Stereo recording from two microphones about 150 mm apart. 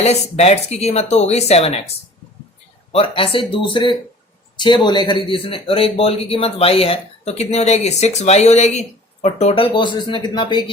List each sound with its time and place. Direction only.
0.0 s speech: 45° left (ahead or behind)
2.9 s speech: 40° left (ahead or behind)
9.7 s speech: 30° left (ahead or behind)